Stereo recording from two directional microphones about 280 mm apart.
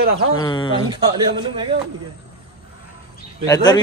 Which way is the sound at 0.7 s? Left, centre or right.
Centre.